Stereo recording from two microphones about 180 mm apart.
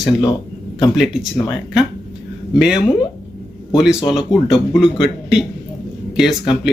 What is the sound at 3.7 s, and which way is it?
Speech, 5° right (ahead or behind).